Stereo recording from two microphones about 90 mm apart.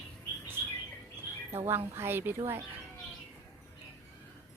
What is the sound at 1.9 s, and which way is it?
Speech, 25° right (ahead or behind).